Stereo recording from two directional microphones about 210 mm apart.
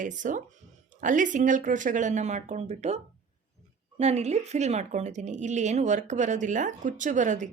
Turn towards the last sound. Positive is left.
turn(degrees=-35)  # may be behind; listen again after turning